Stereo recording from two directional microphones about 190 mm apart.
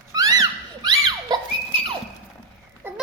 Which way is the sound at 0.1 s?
20° right (ahead or behind).